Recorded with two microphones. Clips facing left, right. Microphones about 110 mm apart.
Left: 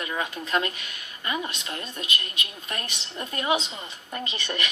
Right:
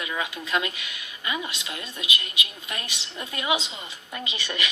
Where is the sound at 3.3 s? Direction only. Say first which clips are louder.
Left 1 dB; 35° left (ahead or behind).